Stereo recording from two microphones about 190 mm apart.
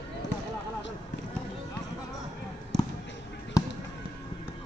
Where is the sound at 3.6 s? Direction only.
15° left (ahead or behind).